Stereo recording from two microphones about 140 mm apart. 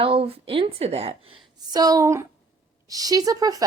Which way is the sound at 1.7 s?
25° right (ahead or behind).